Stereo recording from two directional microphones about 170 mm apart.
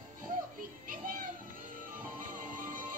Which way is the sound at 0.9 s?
55° right (ahead or behind).